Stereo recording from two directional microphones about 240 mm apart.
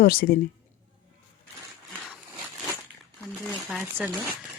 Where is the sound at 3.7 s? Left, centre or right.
Centre.